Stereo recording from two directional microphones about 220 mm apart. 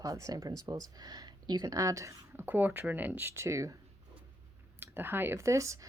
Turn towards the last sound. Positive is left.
turn(degrees=-15)  # may be behind; listen again after turning